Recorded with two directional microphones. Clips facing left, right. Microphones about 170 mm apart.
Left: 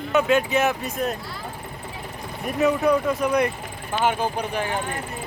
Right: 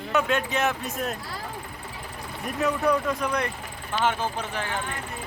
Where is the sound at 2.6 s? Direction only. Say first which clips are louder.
Left 4 dB; 5° left (ahead or behind).